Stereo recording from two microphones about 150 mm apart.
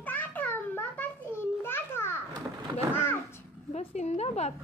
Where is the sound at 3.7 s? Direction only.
45° left (ahead or behind).